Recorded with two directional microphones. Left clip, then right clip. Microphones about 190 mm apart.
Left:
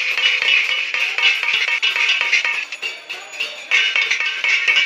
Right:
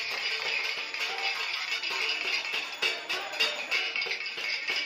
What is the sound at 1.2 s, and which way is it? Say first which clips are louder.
Music: left 15 dB; 50° left (ahead or behind).